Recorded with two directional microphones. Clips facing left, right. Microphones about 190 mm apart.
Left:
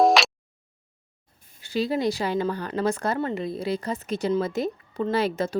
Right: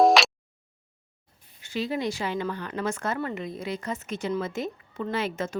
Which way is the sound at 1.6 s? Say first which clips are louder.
Left 4 dB; 35° left (ahead or behind).